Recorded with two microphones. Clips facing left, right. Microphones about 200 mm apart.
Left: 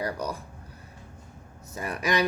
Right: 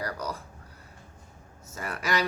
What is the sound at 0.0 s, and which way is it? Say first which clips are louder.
Speech: left 3 dB; 15° left (ahead or behind).